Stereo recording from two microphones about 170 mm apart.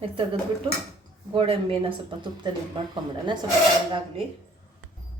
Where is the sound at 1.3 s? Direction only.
30° right (ahead or behind).